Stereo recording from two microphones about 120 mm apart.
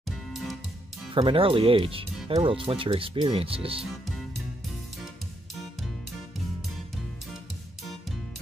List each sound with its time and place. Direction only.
0.3 s music: centre (ahead or behind)
1.1 s speech: 45° right (ahead or behind)